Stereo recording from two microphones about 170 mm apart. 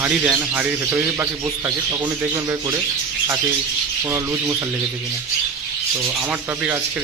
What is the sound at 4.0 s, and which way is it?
Speech, 15° right (ahead or behind).